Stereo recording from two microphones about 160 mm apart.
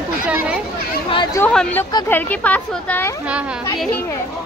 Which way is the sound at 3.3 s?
5° right (ahead or behind).